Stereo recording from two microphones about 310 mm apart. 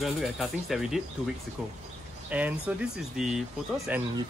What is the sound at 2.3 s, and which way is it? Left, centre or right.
Speech, centre.